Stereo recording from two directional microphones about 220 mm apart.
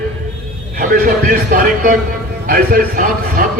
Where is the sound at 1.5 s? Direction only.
40° right (ahead or behind).